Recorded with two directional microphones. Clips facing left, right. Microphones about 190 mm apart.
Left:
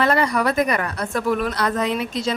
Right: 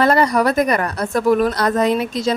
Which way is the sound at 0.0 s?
40° right (ahead or behind).